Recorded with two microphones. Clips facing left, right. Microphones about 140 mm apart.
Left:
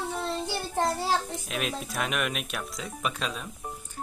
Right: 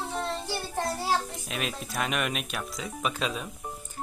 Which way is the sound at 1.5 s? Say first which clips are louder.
Left 2 dB; centre (ahead or behind).